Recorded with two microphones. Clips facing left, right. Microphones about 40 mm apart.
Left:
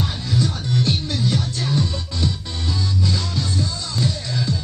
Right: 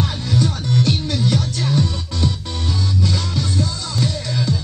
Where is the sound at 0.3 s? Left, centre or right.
Right.